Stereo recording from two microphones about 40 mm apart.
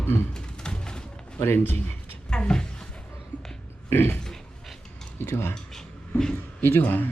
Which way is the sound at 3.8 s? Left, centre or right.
Left.